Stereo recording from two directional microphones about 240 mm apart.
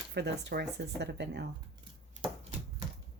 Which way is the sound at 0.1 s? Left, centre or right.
Right.